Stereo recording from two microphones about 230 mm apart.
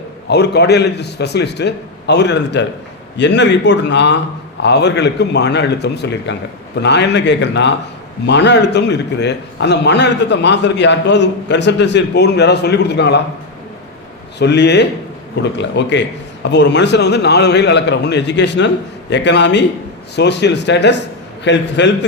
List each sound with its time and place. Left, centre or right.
0.3 s a man's voice: left
14.3 s a man's voice: left